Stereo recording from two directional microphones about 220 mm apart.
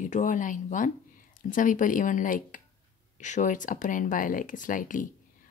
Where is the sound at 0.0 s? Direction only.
35° left (ahead or behind).